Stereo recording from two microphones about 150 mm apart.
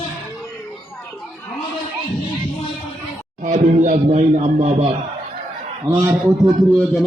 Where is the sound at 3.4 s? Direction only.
60° right (ahead or behind).